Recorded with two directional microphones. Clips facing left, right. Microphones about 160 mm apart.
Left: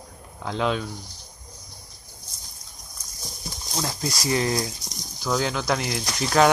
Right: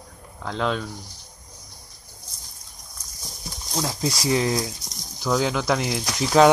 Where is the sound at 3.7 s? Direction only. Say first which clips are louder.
Right 3 dB; 5° right (ahead or behind).